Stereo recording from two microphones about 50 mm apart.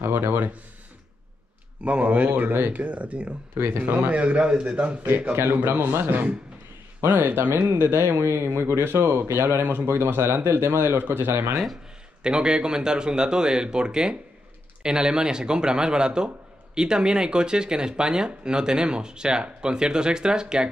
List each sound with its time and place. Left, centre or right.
0.0 s speech: right
1.8 s speech: right
2.7 s speech: right
3.5 s speech: right
4.1 s speech: right
5.3 s speech: right
11.0 s speech: right
11.5 s speech: centre
12.2 s speech: centre